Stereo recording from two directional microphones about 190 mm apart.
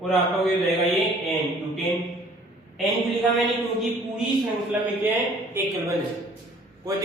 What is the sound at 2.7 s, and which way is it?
A man's voice, centre (ahead or behind).